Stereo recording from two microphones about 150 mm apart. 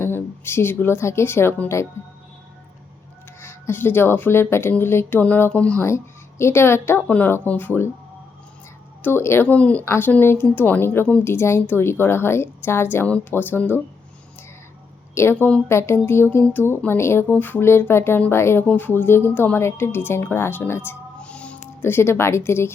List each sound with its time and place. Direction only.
0.0 s speech: 15° left (ahead or behind)
3.4 s speech: 15° left (ahead or behind)
9.0 s speech: 15° left (ahead or behind)
15.1 s speech: 15° left (ahead or behind)